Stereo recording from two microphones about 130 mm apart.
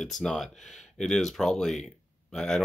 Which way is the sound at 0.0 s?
Centre (ahead or behind).